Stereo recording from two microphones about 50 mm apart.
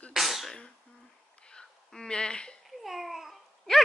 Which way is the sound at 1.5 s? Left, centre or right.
Centre.